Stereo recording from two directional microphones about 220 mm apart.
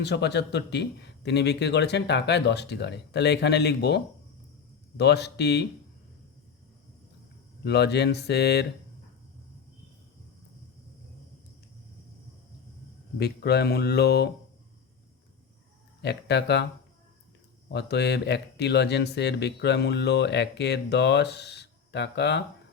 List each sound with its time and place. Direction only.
0.0 s speech: 50° left (ahead or behind)
7.6 s speech: 50° left (ahead or behind)
13.1 s speech: 45° left (ahead or behind)
16.0 s speech: 50° left (ahead or behind)
17.7 s speech: 50° left (ahead or behind)